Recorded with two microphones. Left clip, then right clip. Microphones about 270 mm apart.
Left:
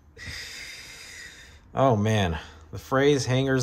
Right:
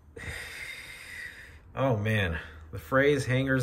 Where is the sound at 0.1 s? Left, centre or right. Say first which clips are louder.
Left 1 dB; centre.